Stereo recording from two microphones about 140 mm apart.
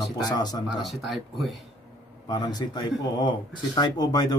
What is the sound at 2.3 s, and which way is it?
Speech, 30° left (ahead or behind).